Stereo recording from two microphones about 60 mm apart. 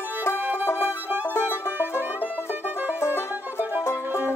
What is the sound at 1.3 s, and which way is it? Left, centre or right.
Music, left.